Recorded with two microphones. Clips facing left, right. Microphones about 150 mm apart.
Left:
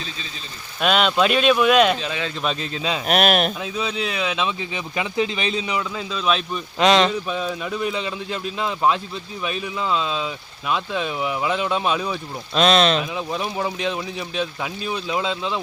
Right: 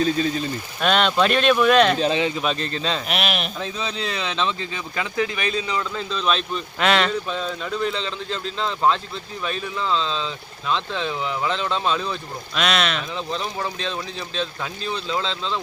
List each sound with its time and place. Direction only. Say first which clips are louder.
0.0 s speech: right 15 dB; 50° right (ahead or behind)
0.8 s speech: left 1 dB; 5° left (ahead or behind)
3.1 s speech: left 7 dB; 45° left (ahead or behind)
3.6 s speech: left 2 dB; 5° left (ahead or behind)
6.1 s speech: left 1 dB; 5° left (ahead or behind)
6.7 s speech: left 4 dB; 20° left (ahead or behind)
12.5 s speech: left 6 dB; 30° left (ahead or behind)
13.0 s speech: left 2 dB; 10° left (ahead or behind)